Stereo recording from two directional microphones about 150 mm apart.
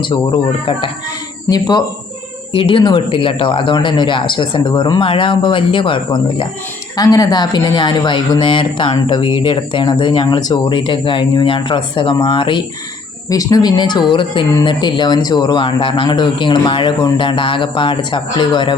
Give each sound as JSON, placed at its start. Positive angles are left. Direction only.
{"t": 0.0, "sound": "speech", "side_deg": 35}
{"t": 2.5, "sound": "speech", "side_deg": 35}